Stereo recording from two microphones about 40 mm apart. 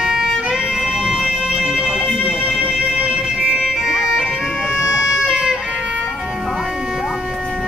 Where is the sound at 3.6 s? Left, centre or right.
Centre.